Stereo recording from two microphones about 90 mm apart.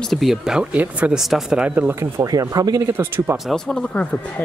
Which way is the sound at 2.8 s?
25° right (ahead or behind).